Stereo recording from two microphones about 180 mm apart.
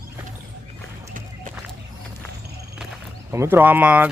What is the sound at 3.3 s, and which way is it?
Speech, 15° right (ahead or behind).